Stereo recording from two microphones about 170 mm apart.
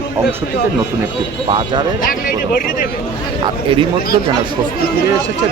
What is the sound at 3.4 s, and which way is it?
Speech, 30° right (ahead or behind).